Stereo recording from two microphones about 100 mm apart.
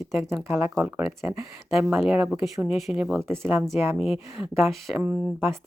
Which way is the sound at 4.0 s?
10° right (ahead or behind).